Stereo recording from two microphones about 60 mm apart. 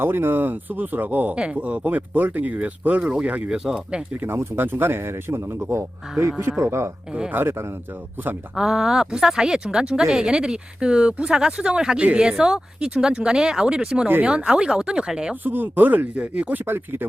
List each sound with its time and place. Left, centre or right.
0.0 s speech: right
3.5 s speech: centre
4.2 s speech: right
7.3 s speech: right
8.5 s speech: centre
15.4 s speech: right